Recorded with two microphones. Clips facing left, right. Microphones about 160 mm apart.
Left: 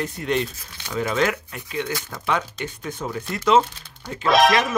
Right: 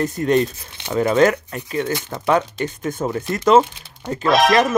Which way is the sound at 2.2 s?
45° right (ahead or behind).